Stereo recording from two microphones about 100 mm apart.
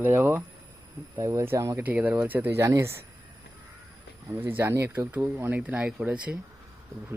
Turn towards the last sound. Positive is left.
turn(degrees=-10)  # may be behind; listen again after turning